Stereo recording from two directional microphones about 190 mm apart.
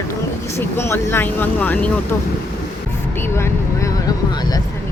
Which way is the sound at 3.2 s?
10° left (ahead or behind).